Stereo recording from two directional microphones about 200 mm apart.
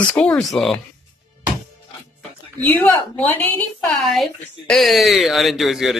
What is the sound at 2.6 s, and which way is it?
A woman's voice, 10° left (ahead or behind).